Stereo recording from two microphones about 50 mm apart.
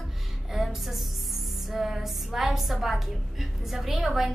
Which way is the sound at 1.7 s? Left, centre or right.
Centre.